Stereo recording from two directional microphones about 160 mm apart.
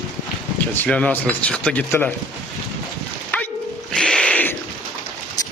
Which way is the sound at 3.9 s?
5° left (ahead or behind).